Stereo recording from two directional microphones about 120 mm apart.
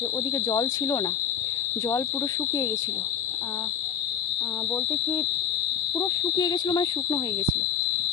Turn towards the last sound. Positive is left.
turn(degrees=35)  # may be behind; listen again after turning